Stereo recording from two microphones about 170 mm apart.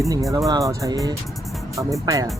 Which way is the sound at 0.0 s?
20° right (ahead or behind).